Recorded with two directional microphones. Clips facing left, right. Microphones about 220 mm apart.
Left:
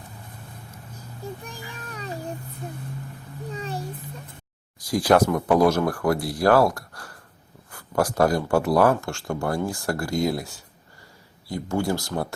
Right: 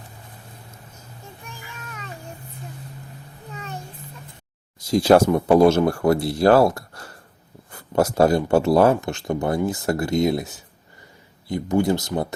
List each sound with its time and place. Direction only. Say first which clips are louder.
1.5 s child singing: left 2 dB; 35° left (ahead or behind)
3.5 s a sound: left 3 dB; 35° left (ahead or behind)
4.8 s speech: right 4 dB; 25° right (ahead or behind)